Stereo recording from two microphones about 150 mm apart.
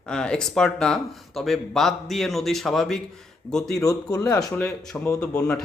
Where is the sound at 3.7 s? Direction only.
20° left (ahead or behind).